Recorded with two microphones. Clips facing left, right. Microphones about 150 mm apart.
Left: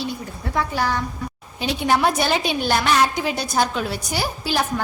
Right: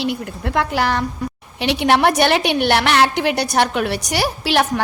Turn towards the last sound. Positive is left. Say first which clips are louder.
# right 5 dB
turn(degrees=-75)  # may be behind; listen again after turning